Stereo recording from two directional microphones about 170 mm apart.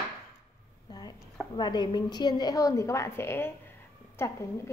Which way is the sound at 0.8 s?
25° left (ahead or behind).